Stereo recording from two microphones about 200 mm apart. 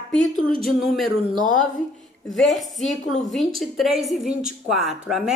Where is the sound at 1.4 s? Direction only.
40° left (ahead or behind).